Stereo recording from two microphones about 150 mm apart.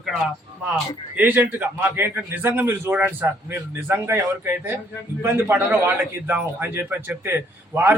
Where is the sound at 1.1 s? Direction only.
10° right (ahead or behind).